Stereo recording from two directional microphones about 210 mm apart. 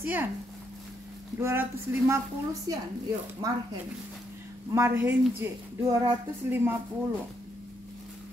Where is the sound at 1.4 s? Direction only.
10° right (ahead or behind).